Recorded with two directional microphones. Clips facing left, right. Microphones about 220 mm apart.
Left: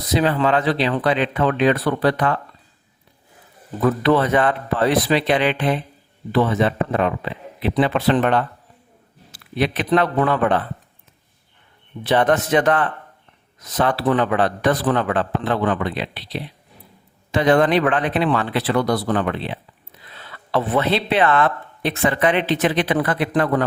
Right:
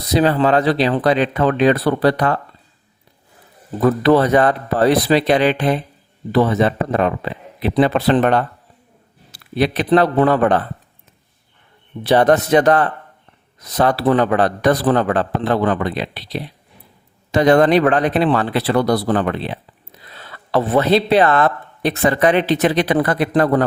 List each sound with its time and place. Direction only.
0.1 s speech: 35° right (ahead or behind)
3.8 s speech: 40° right (ahead or behind)
12.0 s speech: 35° right (ahead or behind)